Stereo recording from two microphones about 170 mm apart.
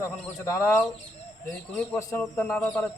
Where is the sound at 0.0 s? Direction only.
15° left (ahead or behind).